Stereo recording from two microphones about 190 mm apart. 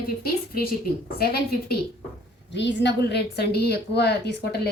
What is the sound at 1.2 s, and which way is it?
Speech, 55° left (ahead or behind).